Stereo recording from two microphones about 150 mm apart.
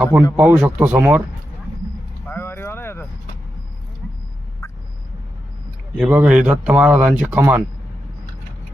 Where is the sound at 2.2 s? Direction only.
15° left (ahead or behind).